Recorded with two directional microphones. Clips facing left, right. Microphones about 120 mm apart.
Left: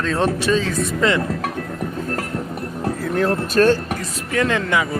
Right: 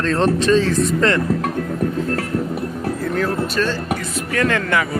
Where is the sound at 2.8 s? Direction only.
25° left (ahead or behind).